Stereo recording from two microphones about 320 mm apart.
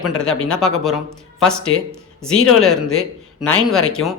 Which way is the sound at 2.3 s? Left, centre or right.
Left.